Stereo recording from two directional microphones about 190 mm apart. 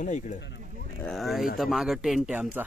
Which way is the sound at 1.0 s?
Centre (ahead or behind).